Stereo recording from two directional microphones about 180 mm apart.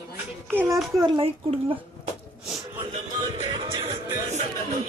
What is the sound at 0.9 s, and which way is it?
Speech, 25° right (ahead or behind).